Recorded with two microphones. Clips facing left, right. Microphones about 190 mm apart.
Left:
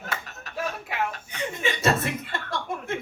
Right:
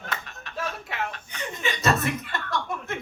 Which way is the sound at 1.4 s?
25° left (ahead or behind).